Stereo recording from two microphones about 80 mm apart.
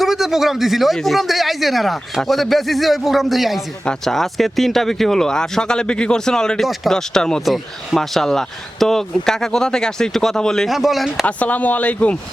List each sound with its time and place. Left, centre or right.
0.0 s speech: centre
11.3 s speech: centre